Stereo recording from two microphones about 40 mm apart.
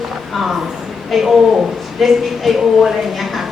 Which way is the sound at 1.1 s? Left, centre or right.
Centre.